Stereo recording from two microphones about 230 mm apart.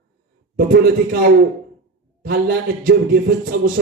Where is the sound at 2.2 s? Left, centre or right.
Right.